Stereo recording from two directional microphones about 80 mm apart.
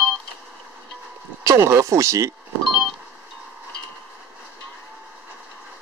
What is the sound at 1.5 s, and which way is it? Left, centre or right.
Speech, right.